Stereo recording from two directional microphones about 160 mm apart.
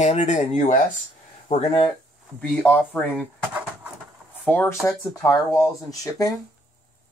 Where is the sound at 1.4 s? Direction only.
35° left (ahead or behind).